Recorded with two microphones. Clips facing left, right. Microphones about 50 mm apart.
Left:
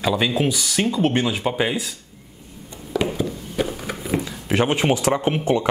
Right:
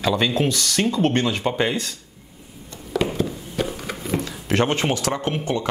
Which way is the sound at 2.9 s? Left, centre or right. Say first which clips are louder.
Even; centre.